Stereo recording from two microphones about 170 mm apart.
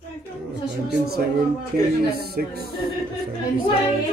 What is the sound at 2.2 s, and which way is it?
Speech, 65° right (ahead or behind).